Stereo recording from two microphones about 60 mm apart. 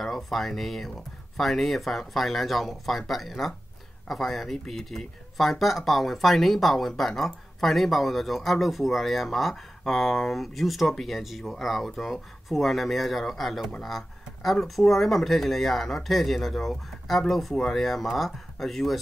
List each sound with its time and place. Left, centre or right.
0.0 s speech: centre